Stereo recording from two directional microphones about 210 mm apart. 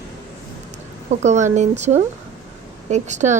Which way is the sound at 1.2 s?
35° right (ahead or behind).